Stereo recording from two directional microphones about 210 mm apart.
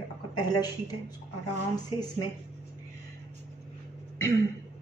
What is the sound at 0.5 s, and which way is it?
A woman's voice, 20° left (ahead or behind).